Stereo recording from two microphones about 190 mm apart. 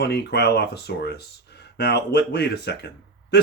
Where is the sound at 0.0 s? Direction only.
60° left (ahead or behind).